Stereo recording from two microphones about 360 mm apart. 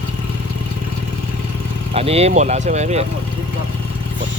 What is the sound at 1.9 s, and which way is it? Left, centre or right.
Speech, centre.